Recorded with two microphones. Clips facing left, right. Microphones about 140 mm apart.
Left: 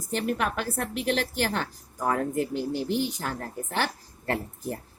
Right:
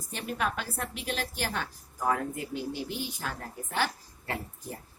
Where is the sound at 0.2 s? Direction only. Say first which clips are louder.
Left 3 dB; 55° left (ahead or behind).